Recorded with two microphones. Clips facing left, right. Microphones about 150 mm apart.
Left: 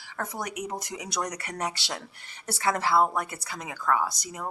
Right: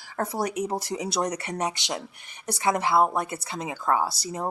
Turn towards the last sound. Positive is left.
turn(degrees=-30)  # may be behind; listen again after turning